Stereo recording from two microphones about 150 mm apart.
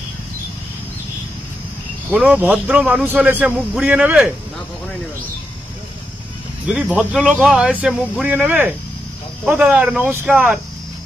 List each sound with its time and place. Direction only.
2.1 s a man's voice: 10° right (ahead or behind)
6.7 s a man's voice: 5° right (ahead or behind)